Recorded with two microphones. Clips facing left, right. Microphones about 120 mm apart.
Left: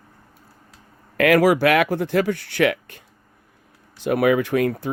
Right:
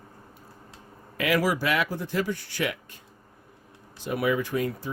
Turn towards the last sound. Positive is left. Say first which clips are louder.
# left 7 dB
turn(degrees=70)  # may be behind; listen again after turning